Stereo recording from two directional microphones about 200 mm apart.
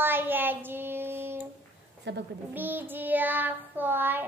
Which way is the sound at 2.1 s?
60° right (ahead or behind).